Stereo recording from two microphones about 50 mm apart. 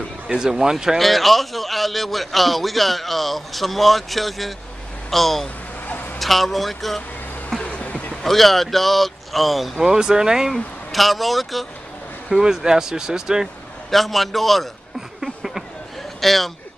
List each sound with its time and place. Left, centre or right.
0.3 s speech: centre
0.9 s a man's voice: centre
7.6 s insect: left
8.2 s a man's voice: centre
10.5 s a man's voice: centre
13.8 s a man's voice: centre
15.1 s a sound: centre
16.2 s speech: centre